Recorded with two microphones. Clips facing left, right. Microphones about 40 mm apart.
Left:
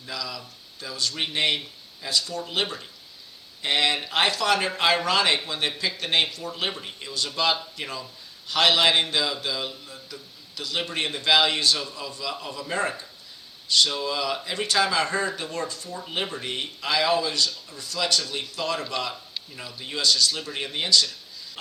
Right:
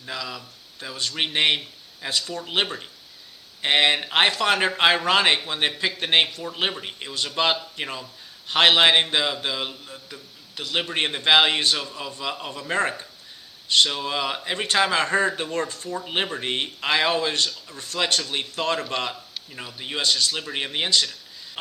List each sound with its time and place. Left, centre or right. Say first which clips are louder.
0.0 s a man's voice: right 1 dB; right